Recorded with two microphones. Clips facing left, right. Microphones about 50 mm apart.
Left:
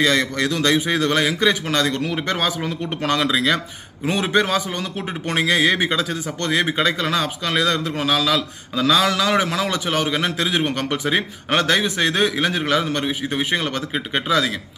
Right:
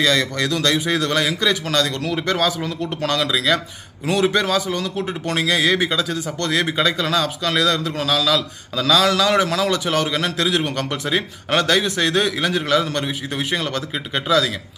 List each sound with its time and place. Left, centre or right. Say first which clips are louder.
0.0 s a man's voice: even; left